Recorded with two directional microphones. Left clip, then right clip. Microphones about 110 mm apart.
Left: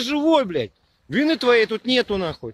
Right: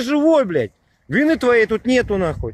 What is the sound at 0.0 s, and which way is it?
Speech, centre (ahead or behind).